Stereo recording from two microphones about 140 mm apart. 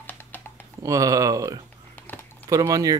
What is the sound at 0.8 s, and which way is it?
Speech, 25° right (ahead or behind).